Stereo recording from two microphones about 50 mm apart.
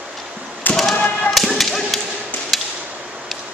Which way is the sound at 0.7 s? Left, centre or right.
Left.